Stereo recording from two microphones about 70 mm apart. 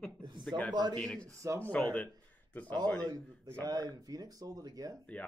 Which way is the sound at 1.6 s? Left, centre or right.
Left.